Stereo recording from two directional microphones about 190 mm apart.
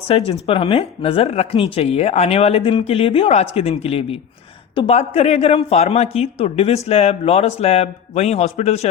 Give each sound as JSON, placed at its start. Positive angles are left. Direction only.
{"t": 0.1, "sound": "speech", "side_deg": 30}